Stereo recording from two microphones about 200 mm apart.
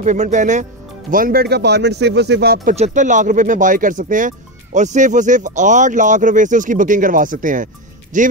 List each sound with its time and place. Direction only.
0.0 s speech: 35° right (ahead or behind)
2.7 s speech: 35° right (ahead or behind)